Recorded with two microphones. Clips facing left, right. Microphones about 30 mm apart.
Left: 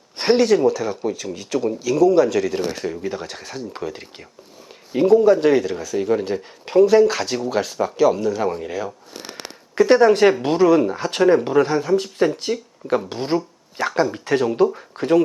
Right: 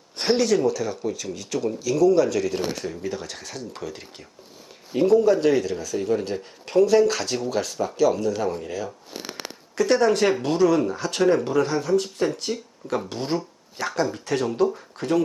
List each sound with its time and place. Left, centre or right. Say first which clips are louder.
0.2 s speech: left 5 dB; centre